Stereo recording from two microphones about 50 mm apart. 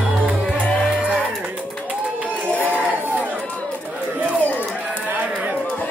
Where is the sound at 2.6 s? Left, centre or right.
Right.